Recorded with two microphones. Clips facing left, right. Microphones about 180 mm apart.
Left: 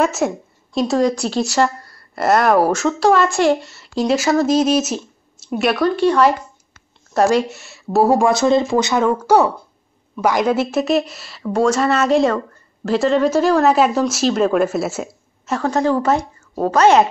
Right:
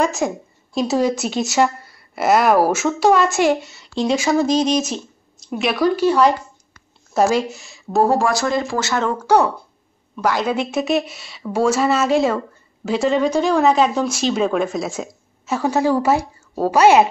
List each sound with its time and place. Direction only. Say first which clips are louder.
0.0 s speech: left 2 dB; centre (ahead or behind)
8.3 s speech: left 5 dB; 25° left (ahead or behind)
10.5 s speech: left 3 dB; 5° left (ahead or behind)